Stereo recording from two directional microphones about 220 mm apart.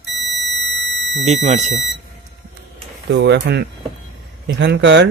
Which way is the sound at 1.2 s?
30° right (ahead or behind).